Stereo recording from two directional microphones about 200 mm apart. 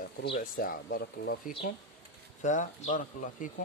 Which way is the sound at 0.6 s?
50° left (ahead or behind).